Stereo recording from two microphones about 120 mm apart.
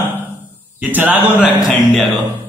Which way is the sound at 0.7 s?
15° right (ahead or behind).